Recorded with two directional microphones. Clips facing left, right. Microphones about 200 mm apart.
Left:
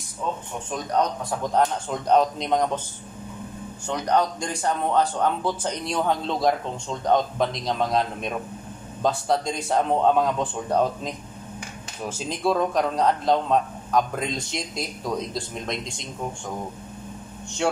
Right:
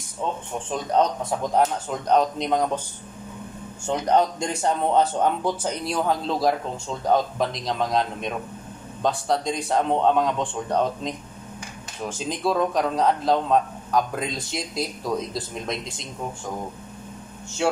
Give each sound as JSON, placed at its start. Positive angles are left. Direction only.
{"t": 1.5, "sound": "a man's voice", "side_deg": 0}
{"t": 3.8, "sound": "a man's voice", "side_deg": -25}
{"t": 5.6, "sound": "a man's voice", "side_deg": -5}
{"t": 17.6, "sound": "speech", "side_deg": -5}